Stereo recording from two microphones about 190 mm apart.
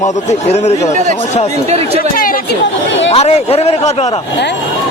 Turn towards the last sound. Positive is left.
turn(degrees=35)  # may be behind; listen again after turning